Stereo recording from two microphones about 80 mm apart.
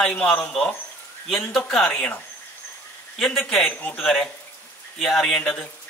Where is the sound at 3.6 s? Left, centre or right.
Left.